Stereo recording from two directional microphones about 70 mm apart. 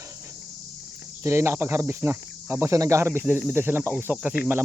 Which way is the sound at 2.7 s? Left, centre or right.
Right.